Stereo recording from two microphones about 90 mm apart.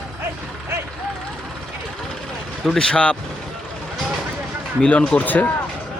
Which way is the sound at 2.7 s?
5° left (ahead or behind).